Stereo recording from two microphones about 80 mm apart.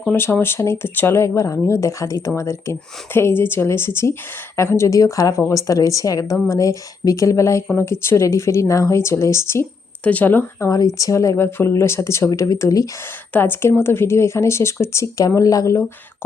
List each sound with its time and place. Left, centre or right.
0.1 s speech: left
10.0 s speech: centre
10.7 s speech: left
13.3 s speech: left